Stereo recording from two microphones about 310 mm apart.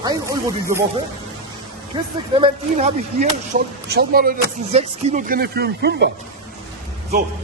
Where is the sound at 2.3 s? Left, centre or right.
Centre.